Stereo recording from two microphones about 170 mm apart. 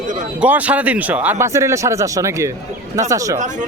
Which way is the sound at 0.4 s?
10° right (ahead or behind).